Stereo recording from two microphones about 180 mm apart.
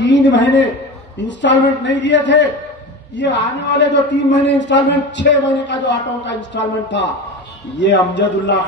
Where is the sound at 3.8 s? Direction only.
80° left.